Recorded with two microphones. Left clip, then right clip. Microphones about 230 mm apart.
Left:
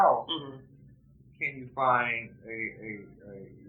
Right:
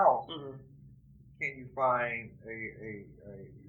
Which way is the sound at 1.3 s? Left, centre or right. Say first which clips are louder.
Left 3 dB; right.